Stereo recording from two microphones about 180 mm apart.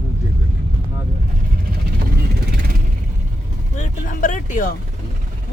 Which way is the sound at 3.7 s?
45° left (ahead or behind).